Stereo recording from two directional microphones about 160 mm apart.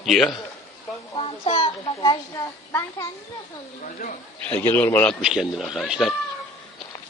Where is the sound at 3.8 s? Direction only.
60° left (ahead or behind).